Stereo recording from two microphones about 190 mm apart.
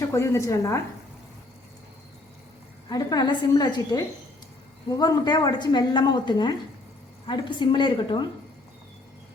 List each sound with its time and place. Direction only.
0.1 s a woman's voice: 15° left (ahead or behind)
2.9 s a woman's voice: 20° left (ahead or behind)